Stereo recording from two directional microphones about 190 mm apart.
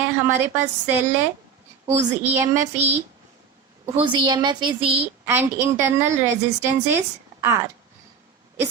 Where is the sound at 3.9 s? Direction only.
25° right (ahead or behind).